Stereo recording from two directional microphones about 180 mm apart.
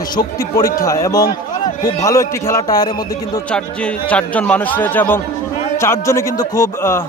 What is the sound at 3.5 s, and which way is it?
A man's voice, 5° left (ahead or behind).